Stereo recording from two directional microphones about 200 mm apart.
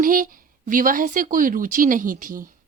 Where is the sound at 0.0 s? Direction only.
45° right (ahead or behind).